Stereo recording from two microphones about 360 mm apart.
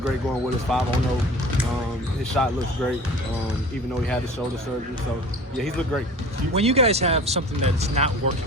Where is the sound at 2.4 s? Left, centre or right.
Centre.